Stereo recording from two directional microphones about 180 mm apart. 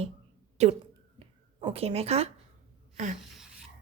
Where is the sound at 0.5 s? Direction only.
35° right (ahead or behind).